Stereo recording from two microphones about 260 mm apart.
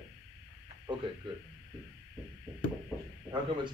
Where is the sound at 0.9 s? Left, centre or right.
Centre.